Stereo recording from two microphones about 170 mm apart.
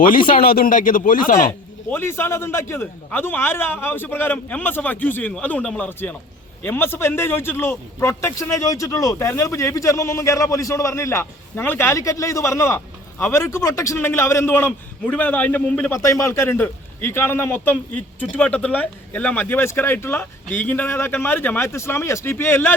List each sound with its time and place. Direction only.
0.0 s speech: 55° left (ahead or behind)
1.9 s a man's voice: 15° left (ahead or behind)